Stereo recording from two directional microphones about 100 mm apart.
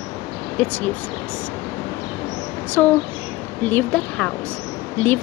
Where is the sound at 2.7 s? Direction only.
15° left (ahead or behind).